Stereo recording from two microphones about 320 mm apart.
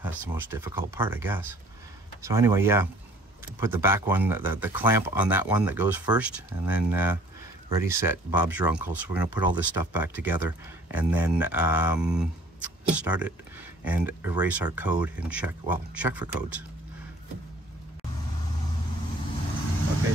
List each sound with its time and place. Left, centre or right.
0.0 s speech: centre